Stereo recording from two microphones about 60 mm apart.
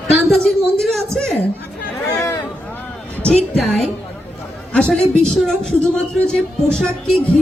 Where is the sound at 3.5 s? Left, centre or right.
Centre.